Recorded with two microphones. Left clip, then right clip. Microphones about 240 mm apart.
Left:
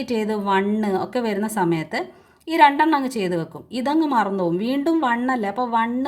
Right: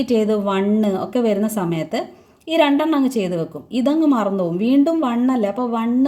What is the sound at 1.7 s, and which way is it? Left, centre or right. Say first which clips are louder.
Speech: right 1 dB; left.